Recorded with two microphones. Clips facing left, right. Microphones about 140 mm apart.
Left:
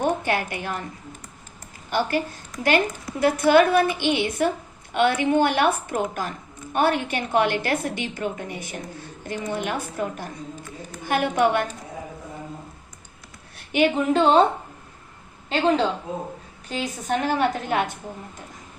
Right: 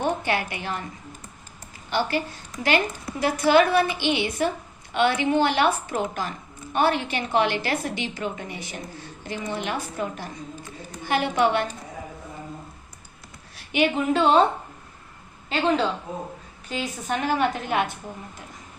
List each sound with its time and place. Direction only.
0.0 s a woman's voice: 50° left (ahead or behind)
1.9 s a woman's voice: 50° left (ahead or behind)
13.6 s a woman's voice: 45° left (ahead or behind)
15.4 s a woman's voice: 40° left (ahead or behind)